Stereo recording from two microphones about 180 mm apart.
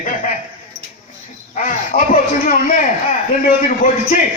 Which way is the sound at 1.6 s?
45° left (ahead or behind).